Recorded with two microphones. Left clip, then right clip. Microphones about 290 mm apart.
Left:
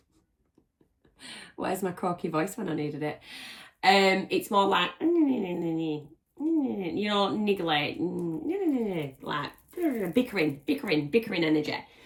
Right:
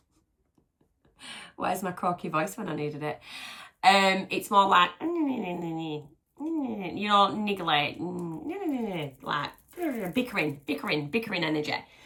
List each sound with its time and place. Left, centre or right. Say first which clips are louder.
1.2 s speech: right 2 dB; centre